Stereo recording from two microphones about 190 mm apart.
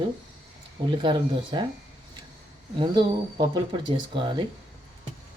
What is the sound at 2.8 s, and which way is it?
Speech, 25° right (ahead or behind).